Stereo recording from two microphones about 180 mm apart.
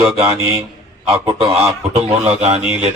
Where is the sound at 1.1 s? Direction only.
25° right (ahead or behind).